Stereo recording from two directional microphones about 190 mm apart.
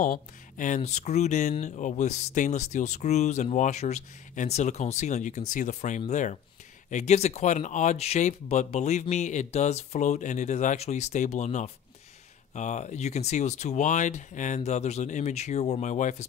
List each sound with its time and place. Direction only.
0.0 s speech: 45° left (ahead or behind)